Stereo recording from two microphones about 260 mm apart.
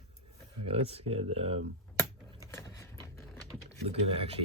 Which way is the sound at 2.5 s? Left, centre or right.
Centre.